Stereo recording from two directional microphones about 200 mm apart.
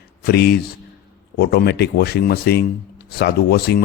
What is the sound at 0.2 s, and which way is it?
A man's voice, 50° left (ahead or behind).